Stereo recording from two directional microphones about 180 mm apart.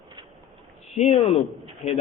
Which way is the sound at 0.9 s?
35° left (ahead or behind).